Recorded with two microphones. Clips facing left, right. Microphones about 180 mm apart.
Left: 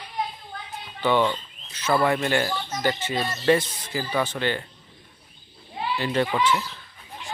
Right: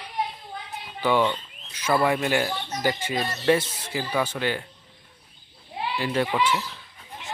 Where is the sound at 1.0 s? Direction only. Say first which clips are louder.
Left 1 dB; 5° right (ahead or behind).